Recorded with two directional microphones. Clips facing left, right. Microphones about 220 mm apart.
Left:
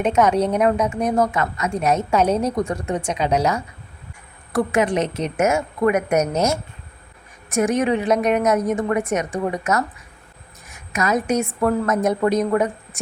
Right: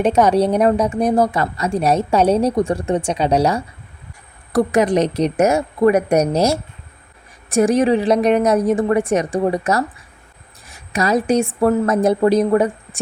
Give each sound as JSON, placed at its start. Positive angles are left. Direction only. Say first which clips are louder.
{"t": 0.0, "sound": "a woman's voice", "louder": "right 3 dB", "side_deg": -35}